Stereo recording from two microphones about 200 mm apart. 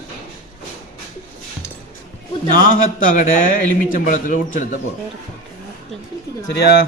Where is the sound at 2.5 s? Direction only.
45° left (ahead or behind).